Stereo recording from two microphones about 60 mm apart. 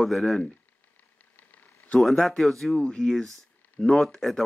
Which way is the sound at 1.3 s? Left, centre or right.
Left.